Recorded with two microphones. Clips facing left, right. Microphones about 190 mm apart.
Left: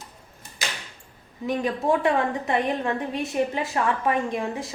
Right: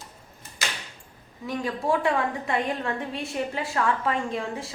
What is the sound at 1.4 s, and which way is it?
A woman's voice, 20° left (ahead or behind).